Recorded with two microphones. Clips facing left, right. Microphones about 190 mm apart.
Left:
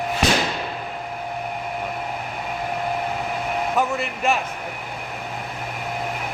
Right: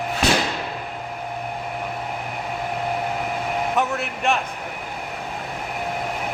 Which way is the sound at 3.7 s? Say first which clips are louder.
Left 1 dB; centre (ahead or behind).